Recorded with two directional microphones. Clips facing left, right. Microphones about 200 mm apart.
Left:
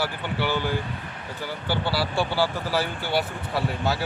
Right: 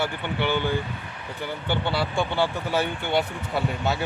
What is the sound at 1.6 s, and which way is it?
Speech, 5° left (ahead or behind).